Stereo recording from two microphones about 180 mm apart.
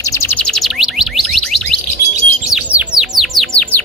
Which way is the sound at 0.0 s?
15° left (ahead or behind).